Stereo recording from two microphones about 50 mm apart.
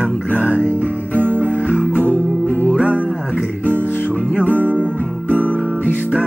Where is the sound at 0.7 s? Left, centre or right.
Right.